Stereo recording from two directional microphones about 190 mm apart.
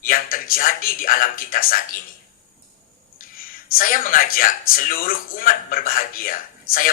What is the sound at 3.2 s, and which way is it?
Speech, 50° left (ahead or behind).